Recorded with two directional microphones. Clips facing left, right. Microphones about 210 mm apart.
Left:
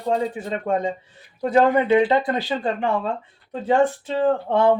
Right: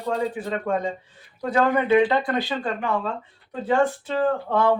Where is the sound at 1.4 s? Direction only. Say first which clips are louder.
Left 4 dB; 20° left (ahead or behind).